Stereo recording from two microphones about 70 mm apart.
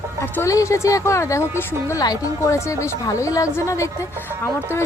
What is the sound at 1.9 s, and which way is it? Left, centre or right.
A woman's voice, left.